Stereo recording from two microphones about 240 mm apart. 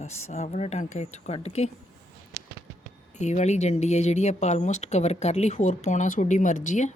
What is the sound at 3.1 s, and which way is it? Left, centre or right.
Speech, left.